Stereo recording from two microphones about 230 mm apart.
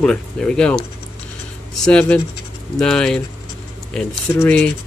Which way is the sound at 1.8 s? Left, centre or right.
Centre.